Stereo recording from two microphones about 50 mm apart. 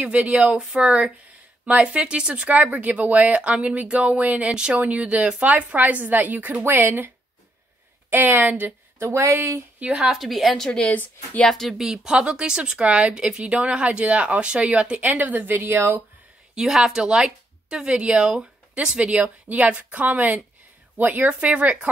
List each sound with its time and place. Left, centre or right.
0.0 s speech: right
0.6 s speech: centre
4.5 s speech: centre
4.7 s a woman's voice: right
8.1 s a woman's voice: right
9.0 s speech: right
9.8 s speech: right
10.1 s a woman's voice: centre
10.9 s a woman's voice: left
11.4 s speech: centre
11.8 s speech: centre; by 15.8 s right
16.5 s a woman's voice: centre; by 21.9 s right